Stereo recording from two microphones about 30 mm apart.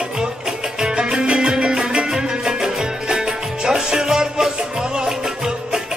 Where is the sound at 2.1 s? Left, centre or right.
Centre.